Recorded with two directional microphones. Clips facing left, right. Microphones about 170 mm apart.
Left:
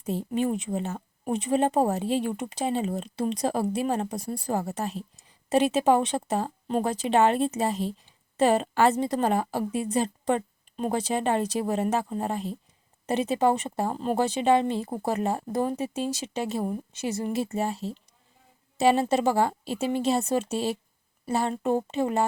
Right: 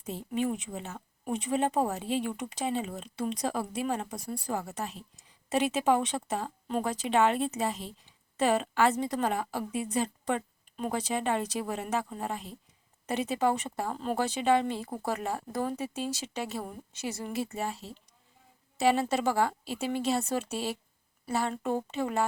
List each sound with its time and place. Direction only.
0.0 s a woman's voice: 35° left (ahead or behind)